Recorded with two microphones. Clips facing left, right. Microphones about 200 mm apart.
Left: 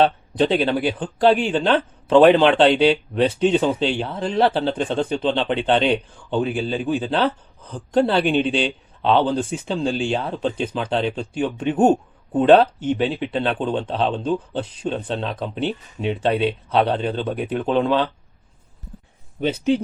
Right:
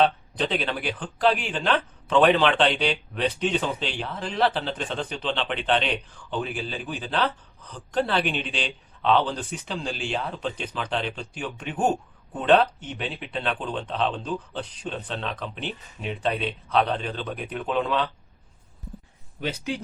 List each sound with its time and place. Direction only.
0.0 s a man's voice: 30° left (ahead or behind)